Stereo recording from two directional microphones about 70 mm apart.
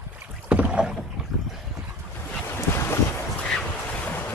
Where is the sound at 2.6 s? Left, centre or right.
Left.